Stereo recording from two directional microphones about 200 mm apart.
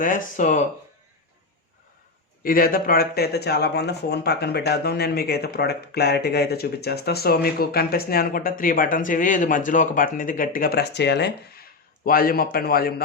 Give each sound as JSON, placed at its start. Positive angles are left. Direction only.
{"t": 0.0, "sound": "speech", "side_deg": 40}
{"t": 2.4, "sound": "speech", "side_deg": 45}
{"t": 12.0, "sound": "speech", "side_deg": 45}